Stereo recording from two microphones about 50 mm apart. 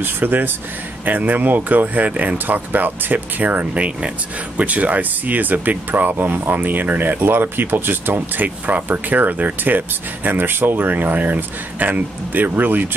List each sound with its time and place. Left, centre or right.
0.0 s speech: right